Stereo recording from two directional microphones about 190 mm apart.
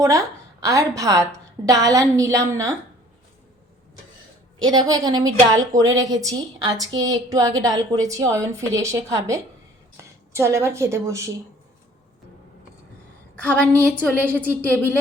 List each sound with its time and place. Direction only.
0.0 s a woman's voice: 15° right (ahead or behind)
4.6 s a woman's voice: 20° right (ahead or behind)
13.3 s a woman's voice: 5° left (ahead or behind)